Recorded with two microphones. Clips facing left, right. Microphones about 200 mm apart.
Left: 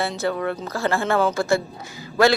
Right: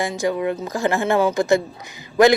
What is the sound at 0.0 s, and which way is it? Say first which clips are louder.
A man's voice: right 2 dB; 15° right (ahead or behind).